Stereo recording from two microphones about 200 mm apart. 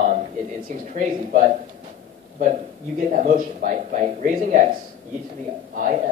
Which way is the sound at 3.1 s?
40° right (ahead or behind).